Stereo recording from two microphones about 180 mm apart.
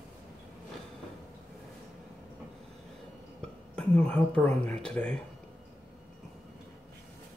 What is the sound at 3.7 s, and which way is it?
Speech, 5° left (ahead or behind).